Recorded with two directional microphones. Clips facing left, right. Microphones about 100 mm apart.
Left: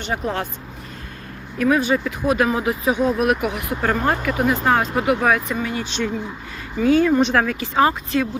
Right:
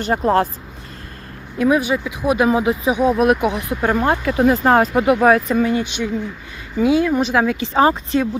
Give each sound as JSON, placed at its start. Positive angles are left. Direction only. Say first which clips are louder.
{"t": 0.0, "sound": "speech", "louder": "right 8 dB", "side_deg": -40}
{"t": 1.5, "sound": "speech", "louder": "right 1 dB", "side_deg": -15}
{"t": 3.2, "sound": "speech", "louder": "right 4 dB", "side_deg": -25}
{"t": 4.3, "sound": "speech", "louder": "right 5 dB", "side_deg": -35}
{"t": 5.8, "sound": "speech", "louder": "right 2 dB", "side_deg": -15}
{"t": 7.4, "sound": "speech", "louder": "right 3 dB", "side_deg": -25}